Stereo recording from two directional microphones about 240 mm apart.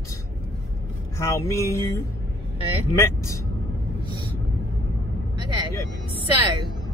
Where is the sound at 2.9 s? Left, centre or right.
Centre.